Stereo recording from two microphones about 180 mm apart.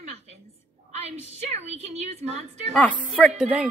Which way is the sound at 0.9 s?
40° right (ahead or behind).